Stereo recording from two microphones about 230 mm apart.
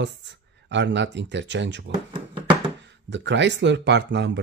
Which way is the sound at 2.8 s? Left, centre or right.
Right.